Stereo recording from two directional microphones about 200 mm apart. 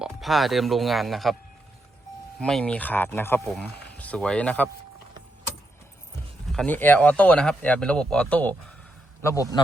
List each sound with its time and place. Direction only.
0.0 s speech: centre (ahead or behind)
2.4 s speech: 5° left (ahead or behind)
6.5 s speech: 5° left (ahead or behind)